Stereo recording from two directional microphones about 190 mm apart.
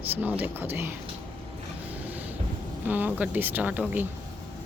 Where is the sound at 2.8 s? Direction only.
10° right (ahead or behind).